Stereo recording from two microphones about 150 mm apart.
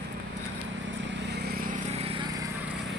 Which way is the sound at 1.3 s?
90° right.